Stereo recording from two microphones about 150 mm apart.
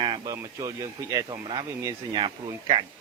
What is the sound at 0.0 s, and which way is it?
Speech, 25° right (ahead or behind).